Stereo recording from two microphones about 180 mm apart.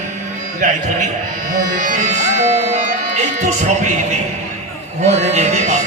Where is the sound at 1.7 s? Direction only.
45° right (ahead or behind).